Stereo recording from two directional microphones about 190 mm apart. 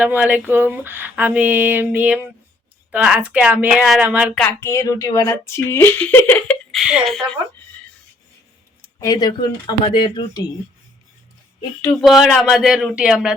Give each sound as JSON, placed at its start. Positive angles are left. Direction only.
{"t": 0.0, "sound": "a sound", "side_deg": -10}
{"t": 4.4, "sound": "speech", "side_deg": 15}
{"t": 8.8, "sound": "speech", "side_deg": 15}
{"t": 11.8, "sound": "speech", "side_deg": 10}